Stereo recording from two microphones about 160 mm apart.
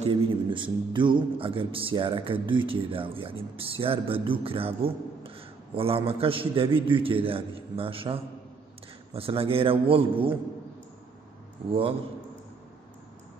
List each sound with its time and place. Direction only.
0.0 s a man's voice: 30° right (ahead or behind)